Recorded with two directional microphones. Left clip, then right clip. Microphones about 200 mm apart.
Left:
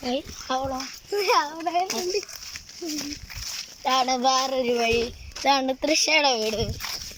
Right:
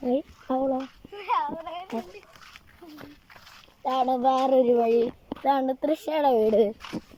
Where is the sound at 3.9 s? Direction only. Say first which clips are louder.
Left 1 dB; 10° right (ahead or behind).